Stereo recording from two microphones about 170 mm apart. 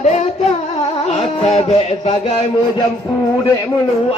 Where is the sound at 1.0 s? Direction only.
40° left (ahead or behind).